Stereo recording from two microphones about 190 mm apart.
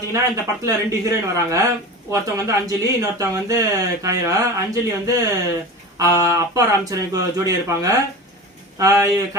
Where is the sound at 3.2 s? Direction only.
15° right (ahead or behind).